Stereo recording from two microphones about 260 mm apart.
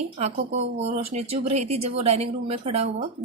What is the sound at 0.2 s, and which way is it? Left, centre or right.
A woman's voice, right.